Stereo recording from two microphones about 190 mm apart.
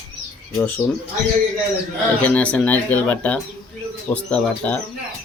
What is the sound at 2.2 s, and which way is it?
Speech, 5° left (ahead or behind).